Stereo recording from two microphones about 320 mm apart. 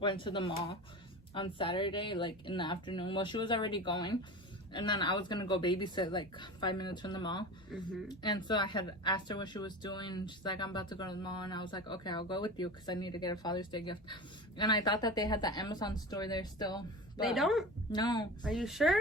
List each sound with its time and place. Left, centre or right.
0.0 s speech: centre
17.2 s speech: centre
17.9 s speech: centre
18.4 s speech: centre